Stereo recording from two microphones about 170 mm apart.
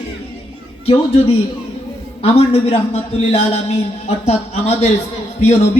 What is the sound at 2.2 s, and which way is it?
A man's voice, 35° left (ahead or behind).